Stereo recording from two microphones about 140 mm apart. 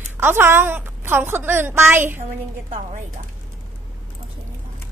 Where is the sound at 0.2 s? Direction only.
15° right (ahead or behind).